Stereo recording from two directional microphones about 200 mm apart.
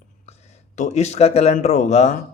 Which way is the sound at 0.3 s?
35° left (ahead or behind).